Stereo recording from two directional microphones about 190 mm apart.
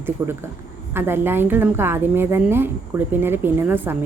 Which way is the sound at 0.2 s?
20° right (ahead or behind).